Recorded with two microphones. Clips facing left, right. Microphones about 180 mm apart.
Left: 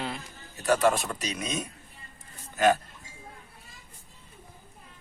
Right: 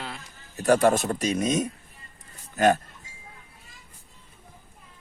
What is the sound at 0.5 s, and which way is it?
Speech, 45° right (ahead or behind).